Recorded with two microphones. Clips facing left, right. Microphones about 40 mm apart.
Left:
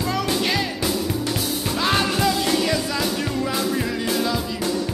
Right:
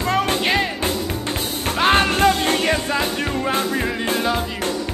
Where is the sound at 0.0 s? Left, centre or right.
Right.